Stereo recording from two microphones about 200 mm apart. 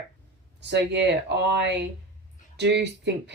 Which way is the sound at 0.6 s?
60° right (ahead or behind).